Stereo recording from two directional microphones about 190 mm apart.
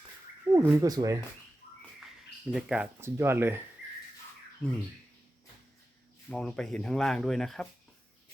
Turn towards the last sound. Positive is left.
turn(degrees=0)  # may be behind; listen again after turning